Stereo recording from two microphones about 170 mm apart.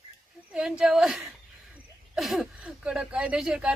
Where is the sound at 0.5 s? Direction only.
5° right (ahead or behind).